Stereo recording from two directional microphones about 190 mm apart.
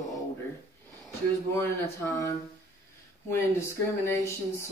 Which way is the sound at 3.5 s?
15° left (ahead or behind).